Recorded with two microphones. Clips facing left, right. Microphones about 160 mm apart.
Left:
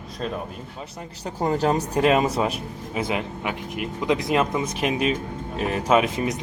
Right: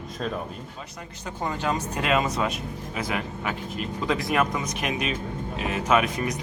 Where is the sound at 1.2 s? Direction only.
40° left (ahead or behind).